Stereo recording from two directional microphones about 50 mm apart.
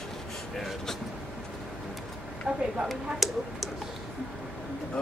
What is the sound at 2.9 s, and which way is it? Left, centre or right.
Speech, centre.